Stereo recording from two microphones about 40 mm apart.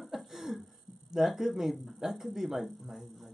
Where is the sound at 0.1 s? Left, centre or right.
Centre.